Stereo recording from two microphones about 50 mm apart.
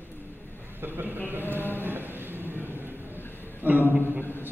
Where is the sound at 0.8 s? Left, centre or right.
Right.